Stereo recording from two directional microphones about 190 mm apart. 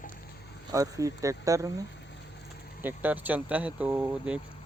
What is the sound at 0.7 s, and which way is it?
Speech, 15° right (ahead or behind).